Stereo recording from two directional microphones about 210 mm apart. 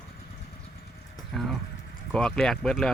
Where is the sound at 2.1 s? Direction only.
5° left (ahead or behind).